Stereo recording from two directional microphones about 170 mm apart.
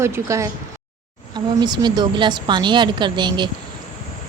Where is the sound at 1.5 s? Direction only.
25° right (ahead or behind).